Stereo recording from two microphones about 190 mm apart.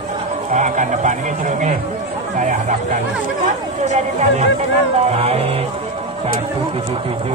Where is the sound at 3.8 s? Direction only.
35° right (ahead or behind).